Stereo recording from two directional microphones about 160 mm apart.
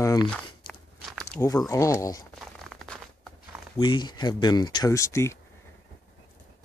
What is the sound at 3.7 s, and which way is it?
Speech, 30° left (ahead or behind).